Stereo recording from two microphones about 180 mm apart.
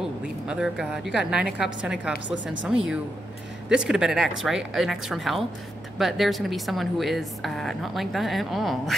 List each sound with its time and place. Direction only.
0.5 s a woman's voice: 5° right (ahead or behind)
2.3 s speech: 90° right
3.6 s a woman's voice: 5° right (ahead or behind)